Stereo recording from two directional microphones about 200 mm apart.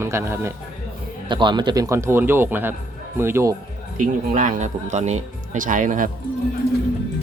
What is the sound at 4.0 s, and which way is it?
Speech, 40° right (ahead or behind).